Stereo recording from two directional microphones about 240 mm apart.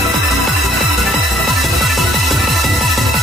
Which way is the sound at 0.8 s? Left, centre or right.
Centre.